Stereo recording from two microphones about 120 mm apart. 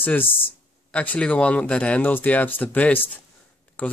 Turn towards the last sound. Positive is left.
turn(degrees=15)  # may be behind; listen again after turning